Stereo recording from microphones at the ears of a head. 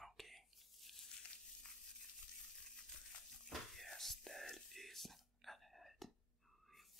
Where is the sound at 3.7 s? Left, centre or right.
Centre.